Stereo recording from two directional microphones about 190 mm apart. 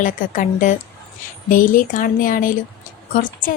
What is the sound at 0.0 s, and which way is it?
Speech, 40° left (ahead or behind).